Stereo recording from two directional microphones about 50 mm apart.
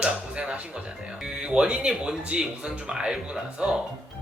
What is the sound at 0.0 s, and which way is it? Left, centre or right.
Music, centre.